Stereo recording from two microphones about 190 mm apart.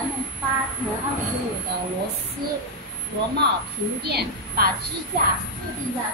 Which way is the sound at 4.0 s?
60° right (ahead or behind).